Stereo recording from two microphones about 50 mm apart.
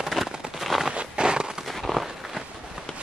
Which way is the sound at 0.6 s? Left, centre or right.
Centre.